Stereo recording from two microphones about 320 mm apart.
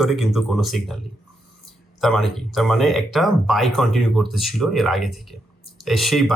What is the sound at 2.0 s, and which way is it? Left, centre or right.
Speech, centre.